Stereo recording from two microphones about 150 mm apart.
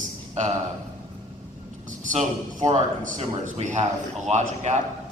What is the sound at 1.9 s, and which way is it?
A man's voice, 60° right (ahead or behind).